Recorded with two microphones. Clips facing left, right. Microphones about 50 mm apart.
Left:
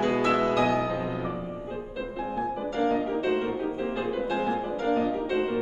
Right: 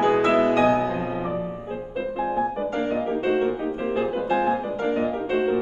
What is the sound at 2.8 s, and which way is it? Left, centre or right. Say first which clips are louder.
Music: left 1 dB; right.